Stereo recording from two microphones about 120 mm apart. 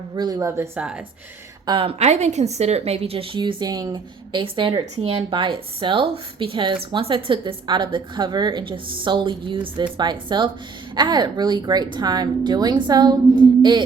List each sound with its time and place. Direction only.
0.2 s speech: 30° right (ahead or behind)
0.8 s speech: 10° right (ahead or behind)
1.6 s a woman's voice: 45° right (ahead or behind)
13.6 s a sound: 40° right (ahead or behind)